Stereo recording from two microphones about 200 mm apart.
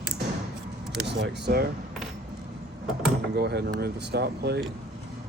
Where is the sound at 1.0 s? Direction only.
60° right (ahead or behind).